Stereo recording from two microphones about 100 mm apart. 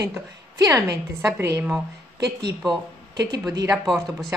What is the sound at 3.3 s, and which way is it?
Speech, 40° right (ahead or behind).